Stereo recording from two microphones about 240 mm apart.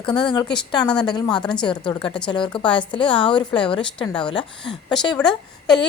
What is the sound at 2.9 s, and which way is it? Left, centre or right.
Speech, left.